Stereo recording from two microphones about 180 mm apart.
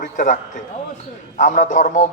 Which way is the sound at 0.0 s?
45° left (ahead or behind).